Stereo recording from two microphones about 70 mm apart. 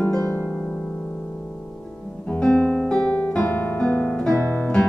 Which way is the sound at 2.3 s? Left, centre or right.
Centre.